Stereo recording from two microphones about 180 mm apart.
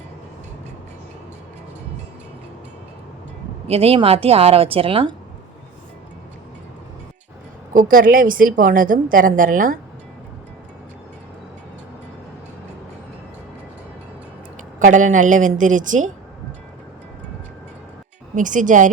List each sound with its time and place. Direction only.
3.7 s a woman's voice: 35° right (ahead or behind)
7.7 s a woman's voice: 50° right (ahead or behind)
14.8 s a woman's voice: 45° right (ahead or behind)
18.3 s a woman's voice: 45° right (ahead or behind)